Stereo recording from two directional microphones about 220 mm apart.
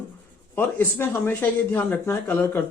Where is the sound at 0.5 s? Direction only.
10° left (ahead or behind).